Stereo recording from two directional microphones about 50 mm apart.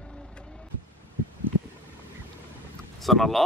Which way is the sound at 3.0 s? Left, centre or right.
Centre.